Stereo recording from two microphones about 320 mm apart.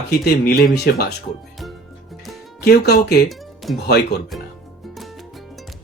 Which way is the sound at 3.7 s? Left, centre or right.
Left.